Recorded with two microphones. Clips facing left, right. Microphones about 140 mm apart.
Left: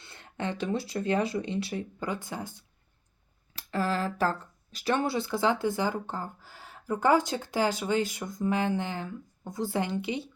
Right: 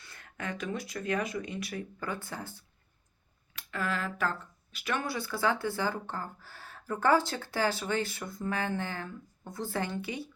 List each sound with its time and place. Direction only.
0.0 s speech: 25° left (ahead or behind)
3.5 s speech: 35° left (ahead or behind)